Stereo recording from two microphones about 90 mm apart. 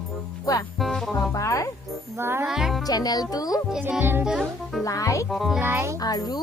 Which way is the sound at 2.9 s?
45° left (ahead or behind).